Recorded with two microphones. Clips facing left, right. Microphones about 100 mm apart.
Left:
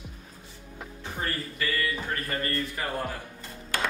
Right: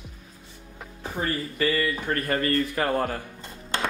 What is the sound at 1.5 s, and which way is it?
Speech, 40° right (ahead or behind).